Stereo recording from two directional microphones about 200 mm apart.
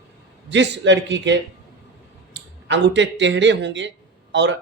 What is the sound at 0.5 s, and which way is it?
Speech, 65° right (ahead or behind).